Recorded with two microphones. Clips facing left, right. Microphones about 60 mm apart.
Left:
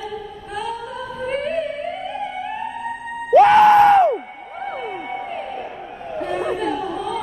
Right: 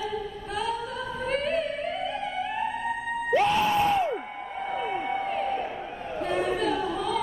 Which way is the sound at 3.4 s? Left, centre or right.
Left.